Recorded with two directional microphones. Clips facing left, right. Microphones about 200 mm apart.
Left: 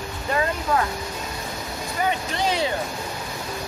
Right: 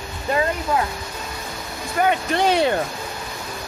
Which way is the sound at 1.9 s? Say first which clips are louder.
Right 6 dB; 60° right (ahead or behind).